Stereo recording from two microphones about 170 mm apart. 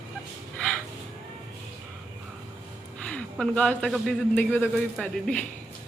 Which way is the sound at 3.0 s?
5° left (ahead or behind).